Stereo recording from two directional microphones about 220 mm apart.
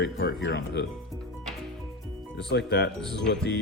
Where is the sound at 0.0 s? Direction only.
45° left (ahead or behind).